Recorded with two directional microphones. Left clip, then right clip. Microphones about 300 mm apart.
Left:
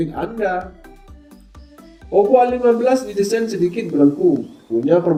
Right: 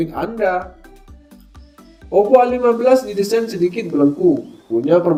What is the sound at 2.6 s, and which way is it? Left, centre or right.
Speech, centre.